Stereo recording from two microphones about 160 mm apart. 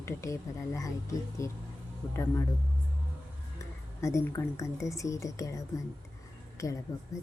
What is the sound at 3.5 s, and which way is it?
A woman's voice, 20° left (ahead or behind).